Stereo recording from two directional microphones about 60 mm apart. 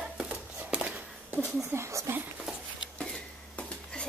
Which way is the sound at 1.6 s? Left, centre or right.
Right.